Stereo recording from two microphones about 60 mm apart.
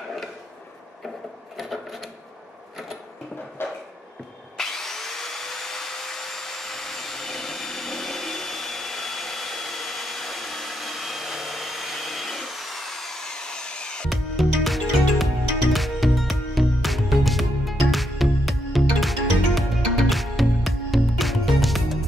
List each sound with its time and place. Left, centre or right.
1.6 s sewing machine: centre
3.6 s a sound: left
4.6 s vacuum cleaner: centre
14.0 s music: centre